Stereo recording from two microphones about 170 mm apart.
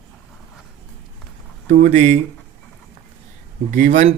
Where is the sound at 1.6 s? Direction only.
45° right (ahead or behind).